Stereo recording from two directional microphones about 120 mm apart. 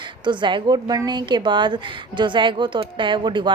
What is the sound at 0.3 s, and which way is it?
A woman's voice, 40° right (ahead or behind).